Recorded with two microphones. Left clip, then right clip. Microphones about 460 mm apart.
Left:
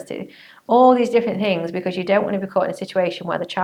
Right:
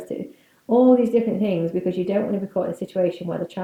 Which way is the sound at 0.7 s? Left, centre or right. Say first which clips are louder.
Left 3 dB; left.